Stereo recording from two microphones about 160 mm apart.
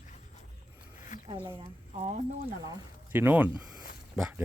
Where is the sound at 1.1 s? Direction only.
55° left (ahead or behind).